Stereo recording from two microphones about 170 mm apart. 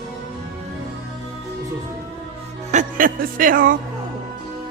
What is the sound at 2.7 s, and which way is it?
Speech, 50° right (ahead or behind).